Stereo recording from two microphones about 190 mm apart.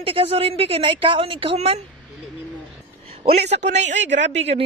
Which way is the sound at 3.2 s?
35° right (ahead or behind).